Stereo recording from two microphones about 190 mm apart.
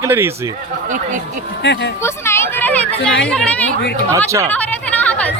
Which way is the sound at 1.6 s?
65° left (ahead or behind).